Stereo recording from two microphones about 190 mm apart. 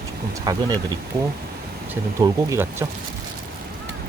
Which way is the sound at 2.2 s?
15° right (ahead or behind).